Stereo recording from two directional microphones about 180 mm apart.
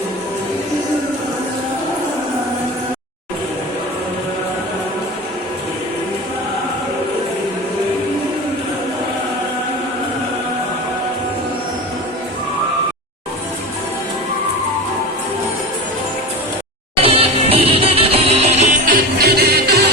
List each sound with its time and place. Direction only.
17.0 s music: 30° right (ahead or behind); by 19.9 s 65° right (ahead or behind)